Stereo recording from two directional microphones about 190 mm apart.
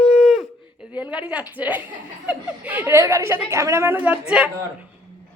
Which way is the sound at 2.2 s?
10° right (ahead or behind).